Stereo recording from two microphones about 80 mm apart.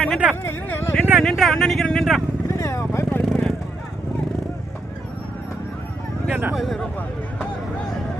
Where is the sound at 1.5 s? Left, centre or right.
Centre.